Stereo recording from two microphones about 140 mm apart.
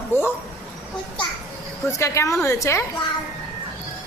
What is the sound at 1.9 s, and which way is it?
Speech, 20° left (ahead or behind).